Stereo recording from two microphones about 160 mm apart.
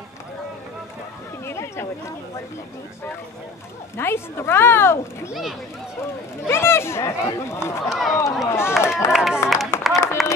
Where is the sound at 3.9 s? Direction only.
15° left (ahead or behind).